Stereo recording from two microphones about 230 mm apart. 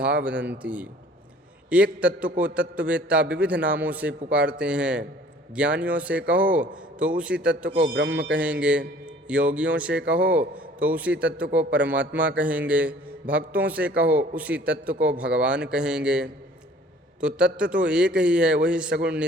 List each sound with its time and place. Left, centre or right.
0.0 s a man's voice: centre
7.8 s a man's voice: right
8.3 s a man's voice: centre